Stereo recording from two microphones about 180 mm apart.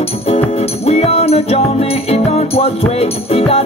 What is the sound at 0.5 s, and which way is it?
Music, 35° left (ahead or behind).